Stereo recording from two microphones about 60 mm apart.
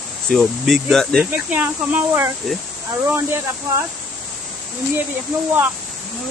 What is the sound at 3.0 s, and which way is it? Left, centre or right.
Speech, right.